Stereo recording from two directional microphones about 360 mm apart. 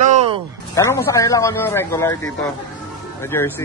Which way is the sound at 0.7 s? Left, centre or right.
Centre.